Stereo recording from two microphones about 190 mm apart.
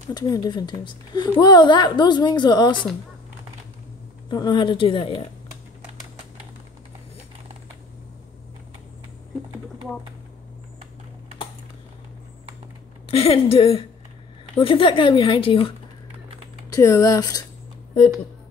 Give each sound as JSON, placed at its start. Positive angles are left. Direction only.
{"t": 0.1, "sound": "a woman's voice", "side_deg": 20}
{"t": 4.3, "sound": "a woman's voice", "side_deg": 25}
{"t": 13.1, "sound": "a woman's voice", "side_deg": 30}
{"t": 16.7, "sound": "speech", "side_deg": 15}